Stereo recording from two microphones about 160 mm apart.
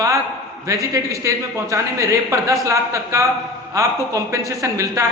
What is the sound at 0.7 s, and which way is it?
Speech, 20° right (ahead or behind).